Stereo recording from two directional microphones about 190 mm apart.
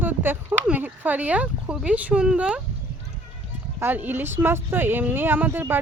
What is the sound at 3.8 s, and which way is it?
Speech, 10° right (ahead or behind).